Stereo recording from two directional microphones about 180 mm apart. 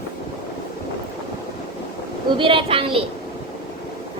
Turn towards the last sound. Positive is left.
turn(degrees=-30)  # may be behind; listen again after turning